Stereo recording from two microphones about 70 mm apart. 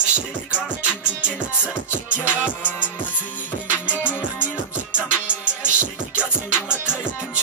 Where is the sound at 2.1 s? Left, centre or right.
Left.